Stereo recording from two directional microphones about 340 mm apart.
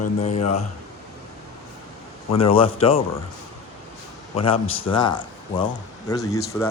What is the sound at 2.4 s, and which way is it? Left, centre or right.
Speech, centre.